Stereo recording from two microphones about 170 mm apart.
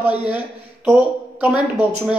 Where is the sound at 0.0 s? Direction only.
10° right (ahead or behind).